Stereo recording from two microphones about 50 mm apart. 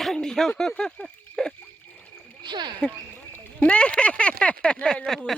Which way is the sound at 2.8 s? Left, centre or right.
Centre.